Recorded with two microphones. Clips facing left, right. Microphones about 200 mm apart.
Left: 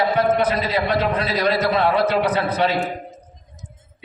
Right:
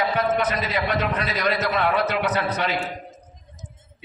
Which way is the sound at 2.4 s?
55° left (ahead or behind).